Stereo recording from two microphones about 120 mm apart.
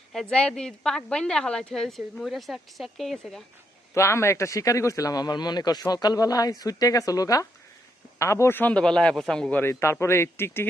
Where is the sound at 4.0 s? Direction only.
25° left (ahead or behind); by 9.6 s 5° left (ahead or behind).